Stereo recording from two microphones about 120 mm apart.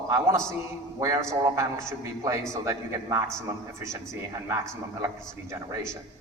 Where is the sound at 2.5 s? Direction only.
25° right (ahead or behind).